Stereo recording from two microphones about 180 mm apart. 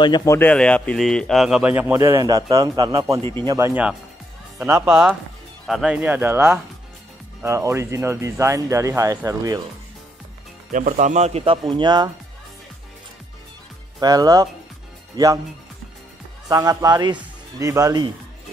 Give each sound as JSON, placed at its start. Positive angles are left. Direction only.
{"t": 0.0, "sound": "speech", "side_deg": 20}
{"t": 3.2, "sound": "speech", "side_deg": 15}
{"t": 3.4, "sound": "speech", "side_deg": -15}
{"t": 4.8, "sound": "speech", "side_deg": -5}
{"t": 10.7, "sound": "speech", "side_deg": -45}
{"t": 13.9, "sound": "speech", "side_deg": -20}
{"t": 16.4, "sound": "speech", "side_deg": -20}